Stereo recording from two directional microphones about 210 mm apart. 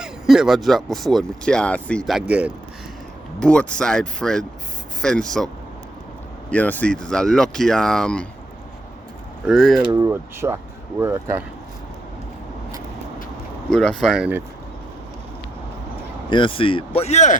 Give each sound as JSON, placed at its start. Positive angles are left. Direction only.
{"t": 0.0, "sound": "speech", "side_deg": 0}
{"t": 3.4, "sound": "speech", "side_deg": 5}
{"t": 6.5, "sound": "speech", "side_deg": 10}
{"t": 9.5, "sound": "speech", "side_deg": 0}
{"t": 9.9, "sound": "speech", "side_deg": -15}
{"t": 13.7, "sound": "speech", "side_deg": 5}
{"t": 16.3, "sound": "speech", "side_deg": 25}